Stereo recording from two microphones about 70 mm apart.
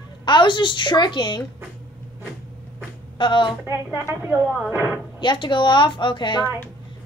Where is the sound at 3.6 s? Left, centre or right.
Right.